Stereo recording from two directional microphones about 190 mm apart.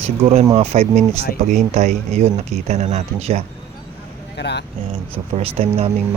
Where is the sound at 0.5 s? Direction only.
35° right (ahead or behind).